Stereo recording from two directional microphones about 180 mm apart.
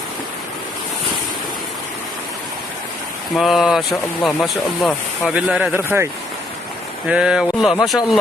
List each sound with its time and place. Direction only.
3.3 s speech: centre (ahead or behind)
7.1 s speech: 5° right (ahead or behind)